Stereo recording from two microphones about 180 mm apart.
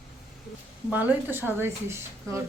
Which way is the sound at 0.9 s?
10° right (ahead or behind).